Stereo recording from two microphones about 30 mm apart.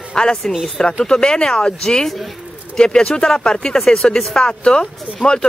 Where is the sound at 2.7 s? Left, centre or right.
Left.